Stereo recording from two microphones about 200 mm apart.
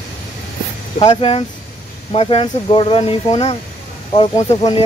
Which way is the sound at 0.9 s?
30° left (ahead or behind).